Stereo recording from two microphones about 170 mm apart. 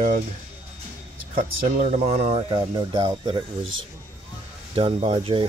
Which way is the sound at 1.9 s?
45° right (ahead or behind).